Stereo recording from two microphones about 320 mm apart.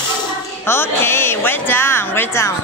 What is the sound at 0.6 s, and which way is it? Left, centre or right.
A woman's voice, centre.